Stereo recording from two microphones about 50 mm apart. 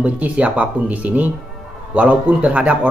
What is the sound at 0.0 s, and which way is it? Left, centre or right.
A man's voice, right.